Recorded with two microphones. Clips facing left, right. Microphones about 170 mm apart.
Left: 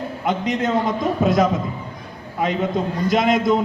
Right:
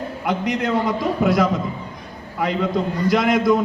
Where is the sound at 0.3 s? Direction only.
20° left (ahead or behind).